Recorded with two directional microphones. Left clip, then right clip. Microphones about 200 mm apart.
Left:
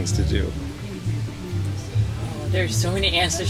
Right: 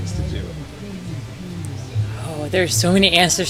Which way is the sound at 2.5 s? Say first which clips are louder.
Right 7 dB; 35° right (ahead or behind).